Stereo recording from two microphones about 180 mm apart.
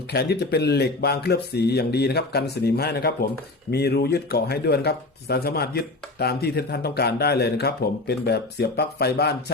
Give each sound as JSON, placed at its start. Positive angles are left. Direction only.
{"t": 0.1, "sound": "speech", "side_deg": 65}